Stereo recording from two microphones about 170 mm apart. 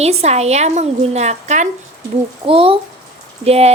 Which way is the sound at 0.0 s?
40° right (ahead or behind).